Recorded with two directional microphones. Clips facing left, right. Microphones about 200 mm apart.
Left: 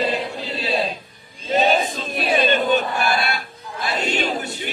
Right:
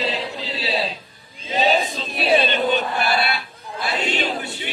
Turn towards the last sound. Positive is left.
turn(degrees=45)  # may be behind; listen again after turning